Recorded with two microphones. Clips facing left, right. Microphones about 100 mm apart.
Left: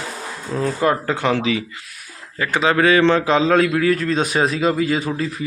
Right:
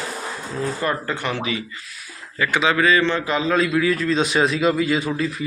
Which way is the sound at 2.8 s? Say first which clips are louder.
Left 4 dB; 70° left (ahead or behind).